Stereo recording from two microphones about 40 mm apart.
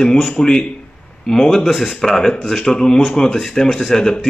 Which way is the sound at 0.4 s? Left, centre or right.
Centre.